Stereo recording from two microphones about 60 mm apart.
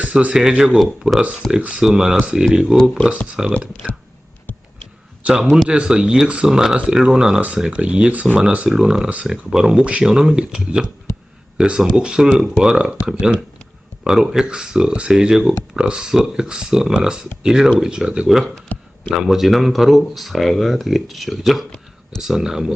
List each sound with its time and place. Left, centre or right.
0.2 s speech: centre
1.5 s speech: centre
5.2 s speech: right
8.7 s speech: centre
18.7 s speech: left
19.1 s speech: centre